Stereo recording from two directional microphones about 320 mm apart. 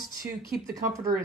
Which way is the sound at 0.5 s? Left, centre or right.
Centre.